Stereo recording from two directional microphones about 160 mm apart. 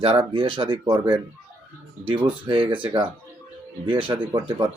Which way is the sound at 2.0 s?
35° right (ahead or behind).